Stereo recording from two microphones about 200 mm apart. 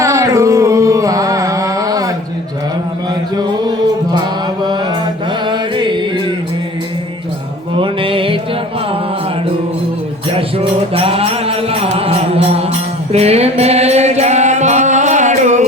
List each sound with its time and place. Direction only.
0.0 s carnatic music: 15° right (ahead or behind)
3.3 s music: 20° right (ahead or behind)
7.8 s music: 25° right (ahead or behind)
10.3 s music: 30° right (ahead or behind)